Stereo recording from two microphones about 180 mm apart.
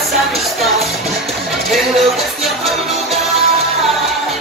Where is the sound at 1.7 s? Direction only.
Centre (ahead or behind).